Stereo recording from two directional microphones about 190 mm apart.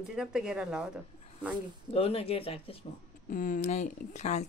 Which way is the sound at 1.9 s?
30° left (ahead or behind).